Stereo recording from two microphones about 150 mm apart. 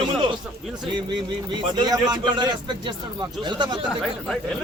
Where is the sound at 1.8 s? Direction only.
25° right (ahead or behind).